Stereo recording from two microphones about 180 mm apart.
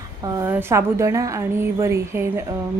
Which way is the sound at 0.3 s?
15° right (ahead or behind).